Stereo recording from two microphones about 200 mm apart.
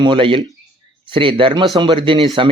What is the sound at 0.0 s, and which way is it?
A man's voice, 25° right (ahead or behind).